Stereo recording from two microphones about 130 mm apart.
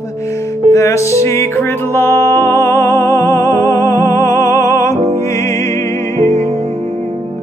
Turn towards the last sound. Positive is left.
turn(degrees=20)  # may be behind; listen again after turning